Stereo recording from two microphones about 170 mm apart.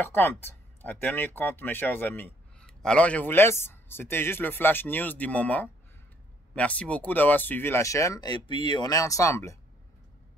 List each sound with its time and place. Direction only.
0.1 s speech: 15° left (ahead or behind)